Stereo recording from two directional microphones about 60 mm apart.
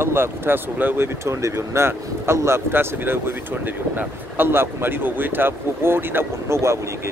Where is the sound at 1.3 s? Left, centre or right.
Right.